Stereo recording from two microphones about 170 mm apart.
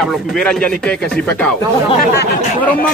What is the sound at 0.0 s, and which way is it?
Speech, centre (ahead or behind).